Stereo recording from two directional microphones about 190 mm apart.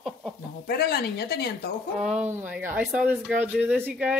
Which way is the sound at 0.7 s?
55° left (ahead or behind).